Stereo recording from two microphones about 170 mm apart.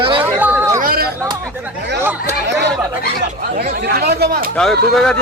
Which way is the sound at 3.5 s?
70° right (ahead or behind).